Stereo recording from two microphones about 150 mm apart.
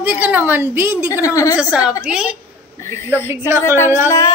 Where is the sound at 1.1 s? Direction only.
20° left (ahead or behind).